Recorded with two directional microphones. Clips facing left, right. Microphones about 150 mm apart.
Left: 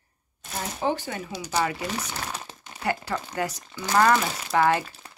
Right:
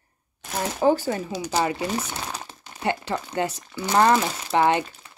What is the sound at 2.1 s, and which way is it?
Crumpling, 10° right (ahead or behind).